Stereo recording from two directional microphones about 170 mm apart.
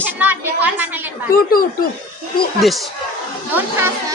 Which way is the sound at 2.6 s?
Centre (ahead or behind).